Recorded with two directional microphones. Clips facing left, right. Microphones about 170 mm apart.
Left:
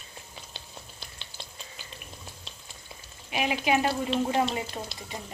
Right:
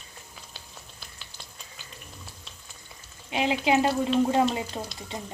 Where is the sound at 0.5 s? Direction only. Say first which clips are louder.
Left 2 dB; 30° left (ahead or behind).